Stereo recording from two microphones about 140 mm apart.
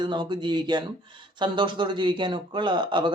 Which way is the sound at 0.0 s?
30° right (ahead or behind).